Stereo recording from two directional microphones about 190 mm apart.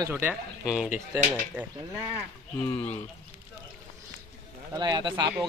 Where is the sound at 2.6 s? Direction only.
10° left (ahead or behind).